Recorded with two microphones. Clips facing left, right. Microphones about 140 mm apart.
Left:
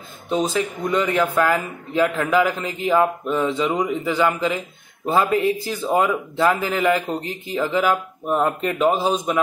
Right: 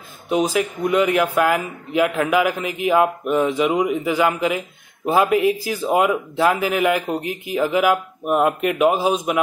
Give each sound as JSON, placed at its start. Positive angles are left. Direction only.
{"t": 0.3, "sound": "a man's voice", "side_deg": -10}